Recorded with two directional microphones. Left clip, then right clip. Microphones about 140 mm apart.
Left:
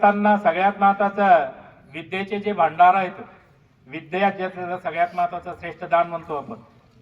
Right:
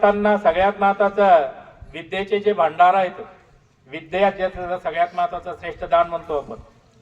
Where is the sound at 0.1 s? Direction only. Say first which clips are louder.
Right 1 dB; 25° right (ahead or behind).